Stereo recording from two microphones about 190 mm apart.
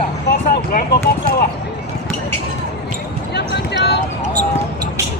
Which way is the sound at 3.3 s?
65° left (ahead or behind).